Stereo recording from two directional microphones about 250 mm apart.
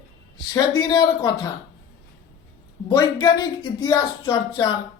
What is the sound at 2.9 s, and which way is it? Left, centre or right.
A man's voice, centre.